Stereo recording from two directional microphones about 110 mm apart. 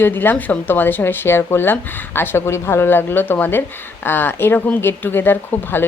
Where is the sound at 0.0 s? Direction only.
20° left (ahead or behind).